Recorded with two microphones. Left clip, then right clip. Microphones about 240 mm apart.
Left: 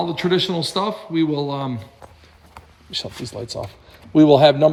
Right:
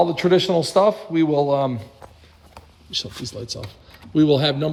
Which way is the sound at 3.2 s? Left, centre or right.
Centre.